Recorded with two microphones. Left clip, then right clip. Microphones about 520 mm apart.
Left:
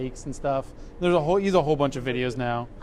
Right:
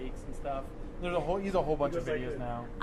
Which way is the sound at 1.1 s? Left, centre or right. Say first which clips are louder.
Left 9 dB; left.